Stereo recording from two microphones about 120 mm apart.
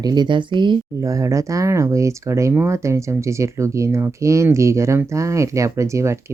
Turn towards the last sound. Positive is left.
turn(degrees=-25)  # may be behind; listen again after turning